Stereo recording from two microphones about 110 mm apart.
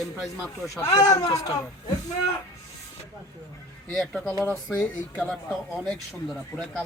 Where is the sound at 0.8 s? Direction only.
30° left (ahead or behind).